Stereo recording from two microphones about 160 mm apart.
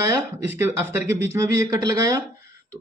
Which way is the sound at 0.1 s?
15° right (ahead or behind).